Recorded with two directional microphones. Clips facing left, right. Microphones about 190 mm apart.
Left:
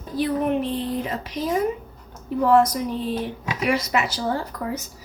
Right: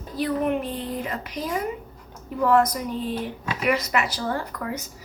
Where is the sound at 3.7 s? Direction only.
25° left (ahead or behind).